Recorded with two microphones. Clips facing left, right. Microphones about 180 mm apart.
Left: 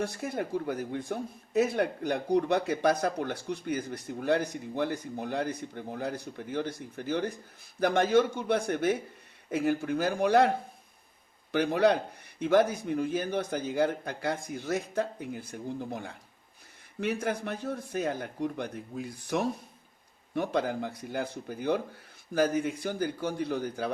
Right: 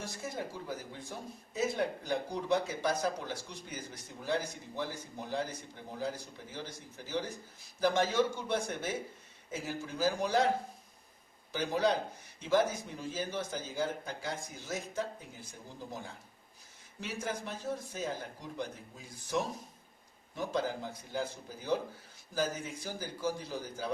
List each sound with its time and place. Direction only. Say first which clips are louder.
0.0 s speech: left 7 dB; 60° left (ahead or behind)
11.5 s speech: left 6 dB; 65° left (ahead or behind)